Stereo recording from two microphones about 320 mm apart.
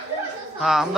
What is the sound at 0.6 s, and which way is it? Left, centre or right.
Speech, centre.